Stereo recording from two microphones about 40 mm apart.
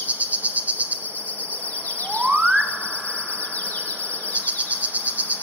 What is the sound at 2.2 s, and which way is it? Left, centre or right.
Chirp tone, right.